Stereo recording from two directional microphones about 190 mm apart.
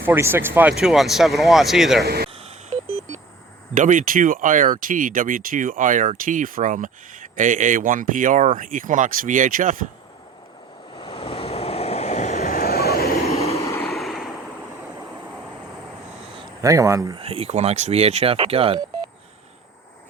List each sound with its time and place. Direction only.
0.0 s speech: 10° right (ahead or behind)
2.0 s speech: 55° right (ahead or behind)
2.3 s telephone dialing: 35° right (ahead or behind)
3.8 s speech: 45° right (ahead or behind)
10.9 s waves: 30° left (ahead or behind)
12.5 s vehicle: 55° left (ahead or behind)
13.6 s vehicle: 15° left (ahead or behind)
13.8 s vehicle: centre (ahead or behind)
16.6 s speech: 15° right (ahead or behind)
17.2 s speech: 30° right (ahead or behind)